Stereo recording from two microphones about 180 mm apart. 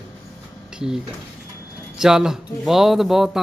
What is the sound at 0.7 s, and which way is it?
A man's voice, 5° right (ahead or behind).